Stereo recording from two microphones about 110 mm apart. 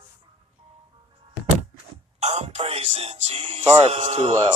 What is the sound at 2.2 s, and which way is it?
Speech, 70° right (ahead or behind).